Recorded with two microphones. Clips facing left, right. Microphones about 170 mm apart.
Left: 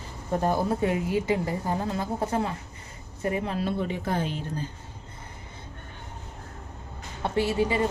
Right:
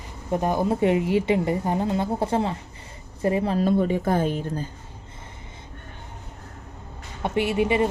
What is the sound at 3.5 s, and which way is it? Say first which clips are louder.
Speech: right 7 dB; 45° right (ahead or behind).